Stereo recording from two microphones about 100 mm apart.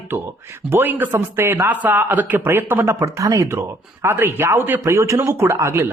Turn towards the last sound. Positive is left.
turn(degrees=-30)  # may be behind; listen again after turning